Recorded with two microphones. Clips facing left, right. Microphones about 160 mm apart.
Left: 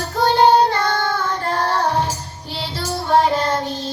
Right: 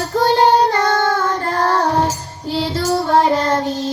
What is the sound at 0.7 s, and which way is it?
Child singing, 40° right (ahead or behind).